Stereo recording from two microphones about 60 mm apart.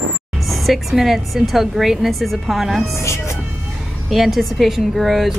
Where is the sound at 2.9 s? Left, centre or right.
Left.